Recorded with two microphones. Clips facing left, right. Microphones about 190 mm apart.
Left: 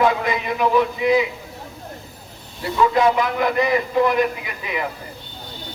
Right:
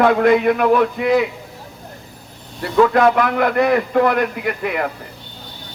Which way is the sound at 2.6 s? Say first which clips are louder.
Right 4 dB; 60° right (ahead or behind).